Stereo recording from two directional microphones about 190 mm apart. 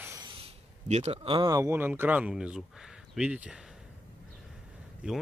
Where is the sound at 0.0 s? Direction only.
15° right (ahead or behind).